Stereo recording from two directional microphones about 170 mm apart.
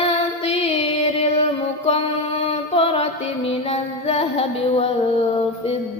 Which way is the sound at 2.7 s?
30° left (ahead or behind).